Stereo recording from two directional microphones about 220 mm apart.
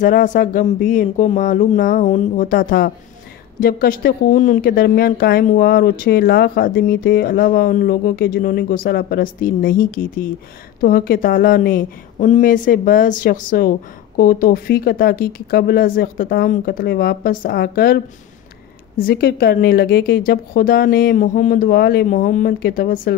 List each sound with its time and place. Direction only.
0.0 s speech: 35° left (ahead or behind)